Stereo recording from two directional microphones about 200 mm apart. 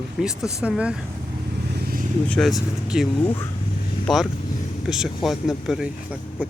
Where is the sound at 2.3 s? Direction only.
Centre (ahead or behind).